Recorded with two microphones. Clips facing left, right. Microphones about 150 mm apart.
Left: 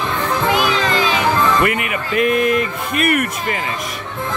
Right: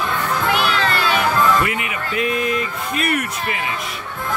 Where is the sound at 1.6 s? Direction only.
55° left (ahead or behind).